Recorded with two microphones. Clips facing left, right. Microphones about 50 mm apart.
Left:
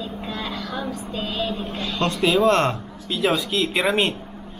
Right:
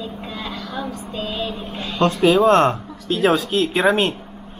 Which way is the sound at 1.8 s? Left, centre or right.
Centre.